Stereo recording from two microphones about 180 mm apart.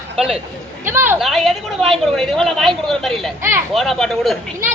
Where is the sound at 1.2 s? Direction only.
Centre (ahead or behind).